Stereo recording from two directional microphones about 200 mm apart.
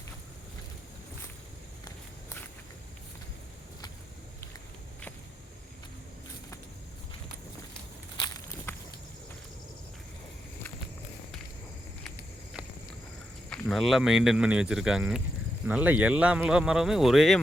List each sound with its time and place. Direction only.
8.1 s walk: 20° left (ahead or behind)
13.5 s speech: centre (ahead or behind)